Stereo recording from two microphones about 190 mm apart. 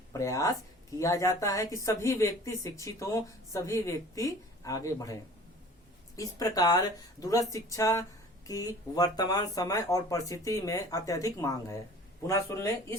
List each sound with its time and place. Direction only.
0.1 s speech: 15° left (ahead or behind)